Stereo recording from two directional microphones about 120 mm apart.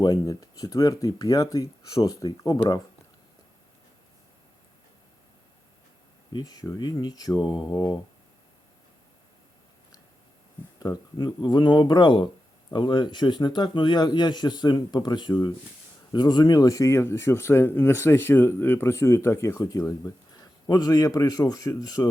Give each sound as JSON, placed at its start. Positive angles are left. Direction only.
{"t": 0.0, "sound": "a man's voice", "side_deg": 30}
{"t": 6.3, "sound": "a man's voice", "side_deg": 30}
{"t": 10.8, "sound": "a man's voice", "side_deg": 35}